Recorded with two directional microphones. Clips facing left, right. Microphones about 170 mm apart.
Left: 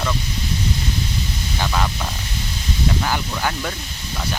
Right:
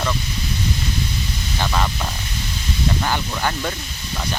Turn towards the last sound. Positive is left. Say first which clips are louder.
# right 1 dB
turn(degrees=0)  # may be behind; listen again after turning